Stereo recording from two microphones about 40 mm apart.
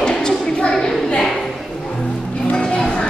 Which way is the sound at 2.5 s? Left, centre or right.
Centre.